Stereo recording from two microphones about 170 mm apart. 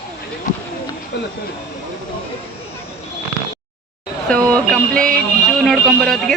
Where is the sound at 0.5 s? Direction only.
50° left (ahead or behind).